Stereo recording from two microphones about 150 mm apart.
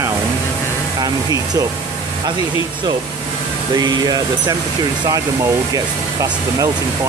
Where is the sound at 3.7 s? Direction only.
25° right (ahead or behind).